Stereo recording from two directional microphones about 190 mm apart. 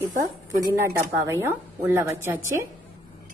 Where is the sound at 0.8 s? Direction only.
15° right (ahead or behind).